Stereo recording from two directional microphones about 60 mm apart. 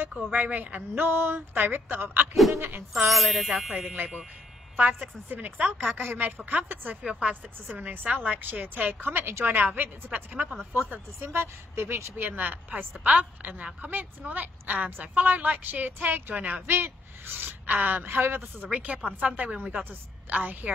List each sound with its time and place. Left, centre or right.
0.2 s a woman's voice: right
1.0 s speech: right
2.9 s speech: centre
3.9 s a woman's voice: right
7.6 s a woman's voice: right
9.0 s speech: right
9.6 s a woman's voice: right
10.7 s speech: right
12.2 s a woman's voice: right
18.7 s a woman's voice: right